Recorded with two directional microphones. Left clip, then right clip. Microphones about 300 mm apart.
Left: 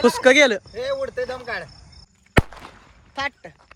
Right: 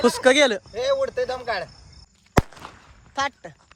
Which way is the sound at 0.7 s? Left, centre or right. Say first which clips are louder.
Right 3 dB; right.